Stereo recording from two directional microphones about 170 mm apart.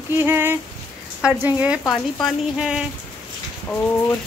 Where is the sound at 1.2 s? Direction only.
5° right (ahead or behind).